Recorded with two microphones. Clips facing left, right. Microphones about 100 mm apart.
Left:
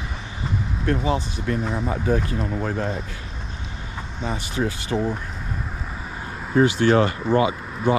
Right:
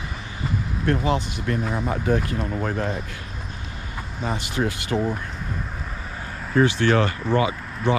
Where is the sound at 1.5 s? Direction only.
50° right (ahead or behind).